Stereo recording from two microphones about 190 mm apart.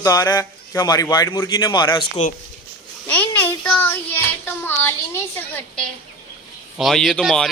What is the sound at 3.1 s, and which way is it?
Speech, 10° left (ahead or behind).